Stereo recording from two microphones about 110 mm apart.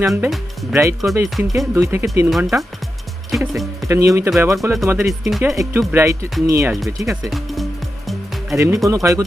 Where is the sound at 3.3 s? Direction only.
Centre (ahead or behind).